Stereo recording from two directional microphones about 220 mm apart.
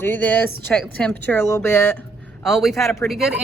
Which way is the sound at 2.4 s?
Centre (ahead or behind).